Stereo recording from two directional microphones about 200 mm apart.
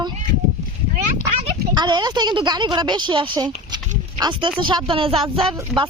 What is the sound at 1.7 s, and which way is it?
Speech, 20° right (ahead or behind).